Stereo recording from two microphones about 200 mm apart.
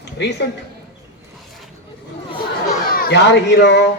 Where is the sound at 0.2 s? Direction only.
60° left (ahead or behind).